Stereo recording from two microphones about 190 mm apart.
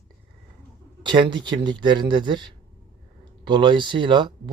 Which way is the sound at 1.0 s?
25° right (ahead or behind).